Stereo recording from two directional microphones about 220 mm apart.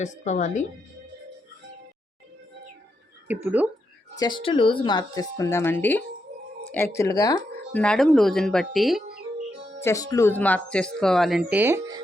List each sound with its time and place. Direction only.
0.0 s a woman's voice: 35° left (ahead or behind)
3.2 s speech: 5° right (ahead or behind)
4.2 s speech: 20° left (ahead or behind); by 9.0 s centre (ahead or behind)
9.8 s speech: 15° left (ahead or behind); by 11.9 s 10° right (ahead or behind)